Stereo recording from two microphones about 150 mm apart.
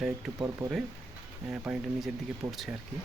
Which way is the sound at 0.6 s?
25° right (ahead or behind).